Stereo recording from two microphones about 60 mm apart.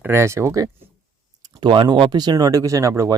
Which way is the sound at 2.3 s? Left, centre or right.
Right.